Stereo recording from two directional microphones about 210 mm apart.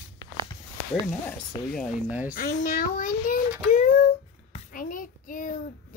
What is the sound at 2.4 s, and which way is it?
A child's voice, 40° left (ahead or behind).